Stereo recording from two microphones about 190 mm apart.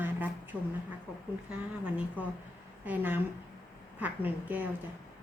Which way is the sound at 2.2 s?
10° right (ahead or behind).